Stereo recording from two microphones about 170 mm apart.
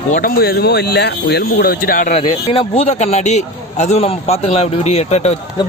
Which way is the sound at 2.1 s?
35° left (ahead or behind).